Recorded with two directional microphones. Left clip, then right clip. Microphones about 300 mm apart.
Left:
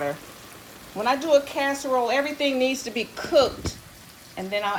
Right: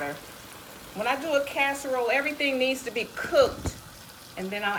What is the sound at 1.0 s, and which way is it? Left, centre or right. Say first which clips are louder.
Speech: left 5 dB; left.